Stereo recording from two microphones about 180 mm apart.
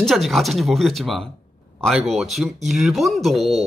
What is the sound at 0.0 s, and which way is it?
A woman's voice, centre (ahead or behind).